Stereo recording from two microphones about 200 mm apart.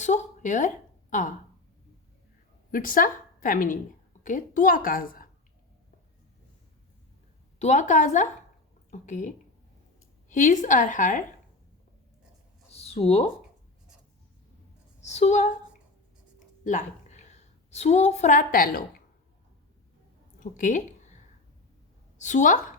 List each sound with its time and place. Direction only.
0.0 s a sound: 35° left (ahead or behind)
2.7 s a woman's voice: 45° left (ahead or behind)
7.6 s a woman's voice: 35° left (ahead or behind)
12.7 s a sound: 30° left (ahead or behind)
15.0 s a woman's voice: 35° left (ahead or behind)
16.6 s a woman's voice: 35° left (ahead or behind)
20.4 s a woman's voice: 40° left (ahead or behind)
22.2 s a woman's voice: 40° left (ahead or behind)